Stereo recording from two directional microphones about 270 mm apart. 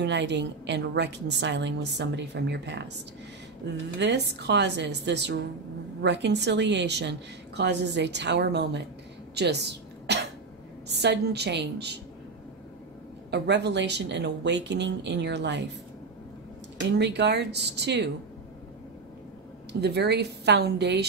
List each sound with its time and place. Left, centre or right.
0.0 s a woman's voice: right
4.0 s a woman's voice: right
9.3 s throat clearing: right
10.9 s a woman's voice: right
13.3 s a woman's voice: right
17.0 s a woman's voice: right
19.7 s a woman's voice: right